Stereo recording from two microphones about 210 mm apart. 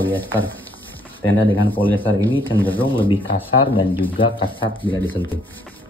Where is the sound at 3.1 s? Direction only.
25° left (ahead or behind).